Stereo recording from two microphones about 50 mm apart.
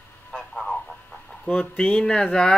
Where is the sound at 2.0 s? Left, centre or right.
Centre.